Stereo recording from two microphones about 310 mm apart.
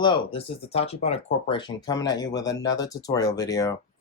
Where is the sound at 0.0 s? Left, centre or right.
Centre.